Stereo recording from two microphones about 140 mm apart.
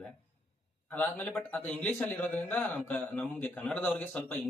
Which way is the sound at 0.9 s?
10° left (ahead or behind).